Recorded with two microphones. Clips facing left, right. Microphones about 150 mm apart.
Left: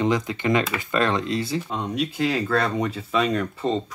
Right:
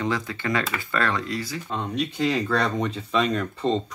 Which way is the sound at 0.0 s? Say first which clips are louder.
Left 4 dB; 20° left (ahead or behind).